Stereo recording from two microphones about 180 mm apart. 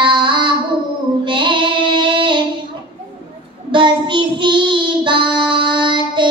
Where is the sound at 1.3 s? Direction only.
25° right (ahead or behind).